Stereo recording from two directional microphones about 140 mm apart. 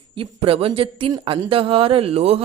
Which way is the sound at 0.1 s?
40° right (ahead or behind).